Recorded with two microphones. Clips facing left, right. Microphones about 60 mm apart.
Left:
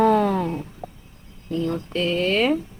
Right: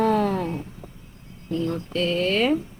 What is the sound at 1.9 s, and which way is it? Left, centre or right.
Speech, centre.